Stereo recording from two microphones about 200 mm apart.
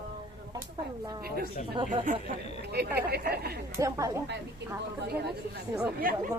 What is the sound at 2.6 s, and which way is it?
Speech, 55° right (ahead or behind).